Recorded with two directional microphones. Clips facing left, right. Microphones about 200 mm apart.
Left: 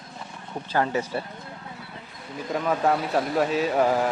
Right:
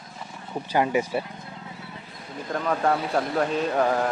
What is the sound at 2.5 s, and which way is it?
Speech, 5° left (ahead or behind).